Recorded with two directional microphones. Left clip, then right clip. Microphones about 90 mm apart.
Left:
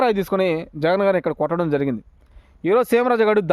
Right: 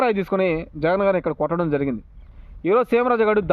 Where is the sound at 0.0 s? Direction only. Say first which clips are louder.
Left 1 dB; 35° left (ahead or behind).